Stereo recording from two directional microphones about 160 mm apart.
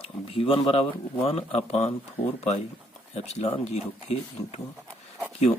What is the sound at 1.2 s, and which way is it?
Speech, 40° left (ahead or behind).